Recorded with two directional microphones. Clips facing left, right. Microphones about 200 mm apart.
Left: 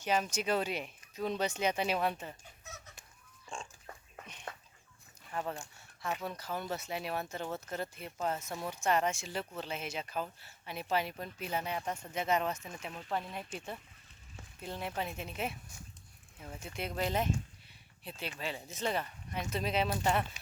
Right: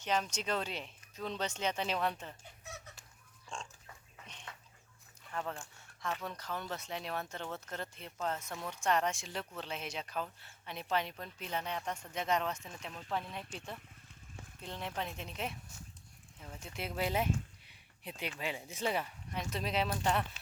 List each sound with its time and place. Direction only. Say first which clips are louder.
0.0 s speech: left 3 dB; 10° left (ahead or behind)
3.5 s pig: left 1 dB; 5° left (ahead or behind)
4.5 s dog: left 8 dB; 50° left (ahead or behind)
5.3 s speech: left 2 dB; 10° left (ahead or behind); by 19.0 s 10° right (ahead or behind)
19.3 s speech: left 3 dB; centre (ahead or behind)